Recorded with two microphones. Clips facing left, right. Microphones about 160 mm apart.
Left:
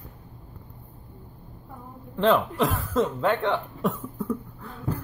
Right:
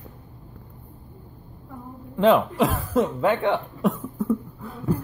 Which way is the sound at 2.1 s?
10° right (ahead or behind).